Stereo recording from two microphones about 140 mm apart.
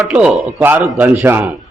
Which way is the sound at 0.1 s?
10° right (ahead or behind).